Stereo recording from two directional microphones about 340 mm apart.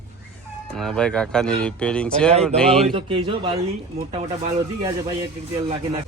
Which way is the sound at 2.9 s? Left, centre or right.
Centre.